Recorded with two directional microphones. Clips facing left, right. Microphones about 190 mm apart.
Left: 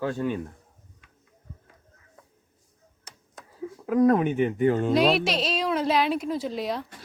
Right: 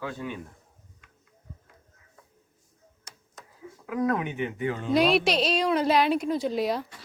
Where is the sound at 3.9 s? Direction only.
45° left (ahead or behind).